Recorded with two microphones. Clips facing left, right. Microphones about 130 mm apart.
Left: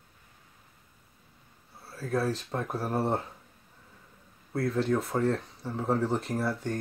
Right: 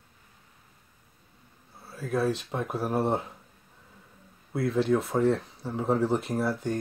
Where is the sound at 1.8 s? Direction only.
Centre (ahead or behind).